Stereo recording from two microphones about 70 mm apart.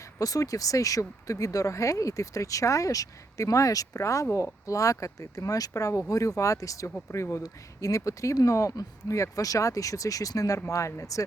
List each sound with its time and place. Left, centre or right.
0.2 s speech: left
7.4 s speech: left